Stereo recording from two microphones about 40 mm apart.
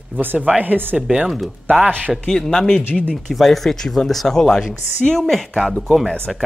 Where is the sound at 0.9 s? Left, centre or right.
Centre.